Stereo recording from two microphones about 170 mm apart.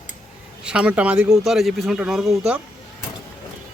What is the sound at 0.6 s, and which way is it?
A man's voice, 5° right (ahead or behind).